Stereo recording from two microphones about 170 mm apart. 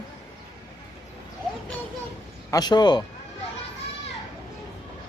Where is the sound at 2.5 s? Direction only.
25° left (ahead or behind).